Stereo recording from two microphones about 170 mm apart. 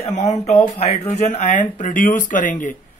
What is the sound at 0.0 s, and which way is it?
Speech, 40° left (ahead or behind).